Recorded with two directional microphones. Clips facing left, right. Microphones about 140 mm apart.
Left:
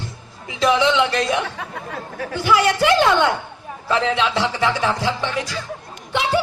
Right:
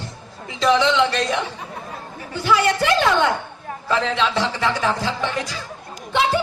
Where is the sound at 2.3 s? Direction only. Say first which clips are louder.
Left 1 dB; 15° left (ahead or behind).